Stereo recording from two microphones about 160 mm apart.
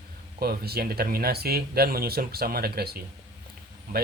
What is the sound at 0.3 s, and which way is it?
Speech, 75° right (ahead or behind).